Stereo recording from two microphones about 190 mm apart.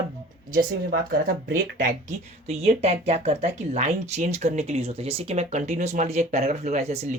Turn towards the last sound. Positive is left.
turn(degrees=-35)  # may be behind; listen again after turning